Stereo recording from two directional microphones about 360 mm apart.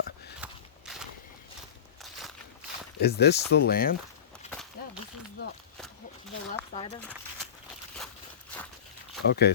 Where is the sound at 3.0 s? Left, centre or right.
Left.